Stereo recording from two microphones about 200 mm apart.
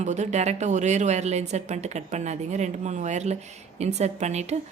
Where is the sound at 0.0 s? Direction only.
35° right (ahead or behind).